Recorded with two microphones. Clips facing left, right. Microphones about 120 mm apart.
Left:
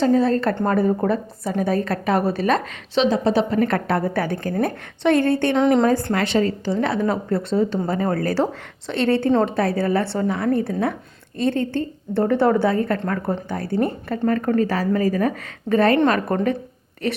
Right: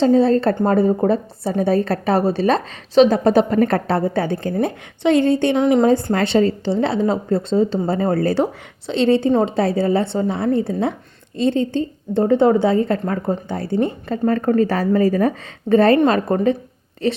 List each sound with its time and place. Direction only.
0.0 s a woman's voice: 30° right (ahead or behind)
3.0 s a woman's voice: 50° right (ahead or behind)
3.6 s a woman's voice: 35° right (ahead or behind); by 5.5 s 20° right (ahead or behind)
5.5 s a woman's voice: 5° right (ahead or behind)
5.8 s a woman's voice: 25° right (ahead or behind)